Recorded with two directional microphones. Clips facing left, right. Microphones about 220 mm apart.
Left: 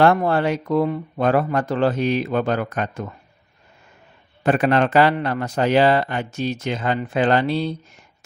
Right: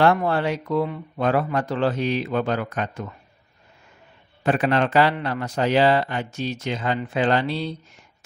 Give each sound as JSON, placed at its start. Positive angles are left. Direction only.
{"t": 0.0, "sound": "a man's voice", "side_deg": 45}
{"t": 4.4, "sound": "a man's voice", "side_deg": 50}